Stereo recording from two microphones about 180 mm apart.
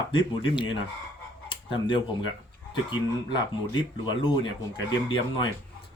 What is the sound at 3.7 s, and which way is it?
Speech, 25° left (ahead or behind).